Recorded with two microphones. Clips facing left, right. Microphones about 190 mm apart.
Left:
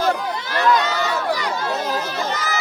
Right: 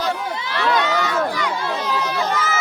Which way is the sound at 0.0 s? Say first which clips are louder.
Left 3 dB; 45° left (ahead or behind).